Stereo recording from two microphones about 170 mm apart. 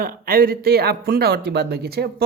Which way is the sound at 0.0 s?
60° right (ahead or behind).